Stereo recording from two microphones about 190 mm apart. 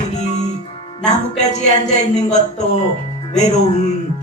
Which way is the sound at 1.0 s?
35° left (ahead or behind).